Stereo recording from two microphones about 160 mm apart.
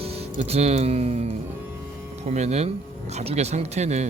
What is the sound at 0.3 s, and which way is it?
Speech, 40° right (ahead or behind).